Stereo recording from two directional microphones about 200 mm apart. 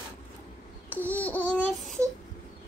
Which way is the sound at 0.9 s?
10° left (ahead or behind).